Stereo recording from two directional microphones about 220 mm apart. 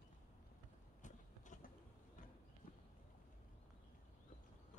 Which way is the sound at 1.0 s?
35° left (ahead or behind).